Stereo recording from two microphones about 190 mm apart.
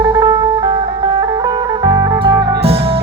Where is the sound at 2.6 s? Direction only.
30° right (ahead or behind).